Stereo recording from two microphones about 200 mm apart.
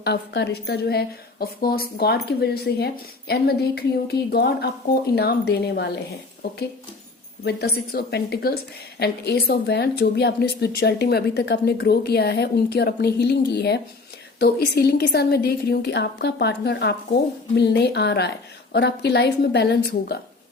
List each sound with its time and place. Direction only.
0.0 s a woman's voice: 55° left (ahead or behind)
7.4 s a woman's voice: 50° left (ahead or behind)